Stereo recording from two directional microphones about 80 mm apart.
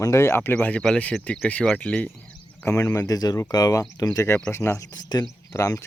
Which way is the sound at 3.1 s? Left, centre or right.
Left.